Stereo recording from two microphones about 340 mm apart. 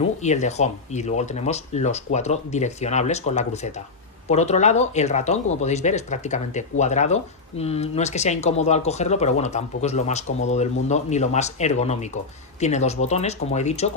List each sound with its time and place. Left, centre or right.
0.2 s speech: centre